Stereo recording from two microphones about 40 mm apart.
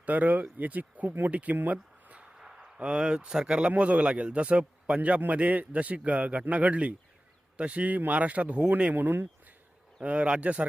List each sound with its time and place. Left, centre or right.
0.0 s a man's voice: right
1.7 s a sound: right
2.4 s a sound: centre
2.7 s speech: right
3.7 s a man's voice: right
8.8 s speech: right
10.0 s a man's voice: right